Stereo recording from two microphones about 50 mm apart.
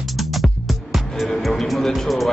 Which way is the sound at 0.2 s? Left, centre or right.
Centre.